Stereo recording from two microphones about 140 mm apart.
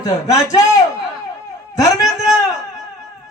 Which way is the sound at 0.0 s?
25° left (ahead or behind).